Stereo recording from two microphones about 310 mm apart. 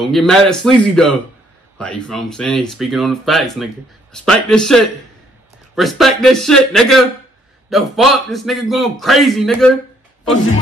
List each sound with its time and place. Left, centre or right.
0.0 s speech: centre